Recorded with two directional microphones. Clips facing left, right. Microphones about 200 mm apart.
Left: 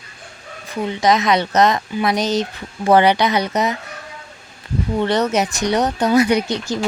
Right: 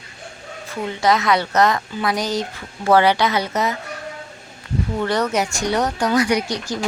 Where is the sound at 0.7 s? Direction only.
20° left (ahead or behind).